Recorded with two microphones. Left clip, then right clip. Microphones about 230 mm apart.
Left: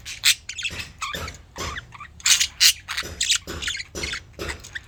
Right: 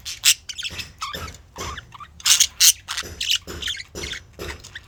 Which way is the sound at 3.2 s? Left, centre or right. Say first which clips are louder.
Right 1 dB; centre.